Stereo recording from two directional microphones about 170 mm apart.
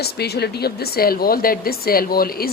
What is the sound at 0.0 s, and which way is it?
Speech, 70° left (ahead or behind).